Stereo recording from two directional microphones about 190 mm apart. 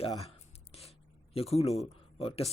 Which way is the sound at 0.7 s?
30° left (ahead or behind).